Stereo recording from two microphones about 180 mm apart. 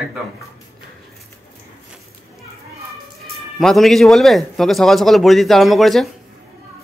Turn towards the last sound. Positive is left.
turn(degrees=0)  # may be behind; listen again after turning